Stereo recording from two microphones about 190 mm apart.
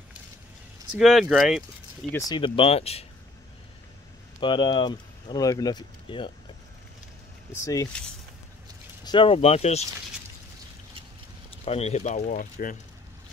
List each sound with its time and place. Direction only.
0.9 s speech: centre (ahead or behind)
2.3 s speech: 25° left (ahead or behind)
4.4 s speech: 25° left (ahead or behind)
7.6 s speech: 20° left (ahead or behind)
9.0 s speech: 25° left (ahead or behind)
11.6 s speech: 35° left (ahead or behind)